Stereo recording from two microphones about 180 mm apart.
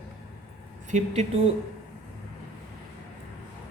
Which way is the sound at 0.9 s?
40° right (ahead or behind).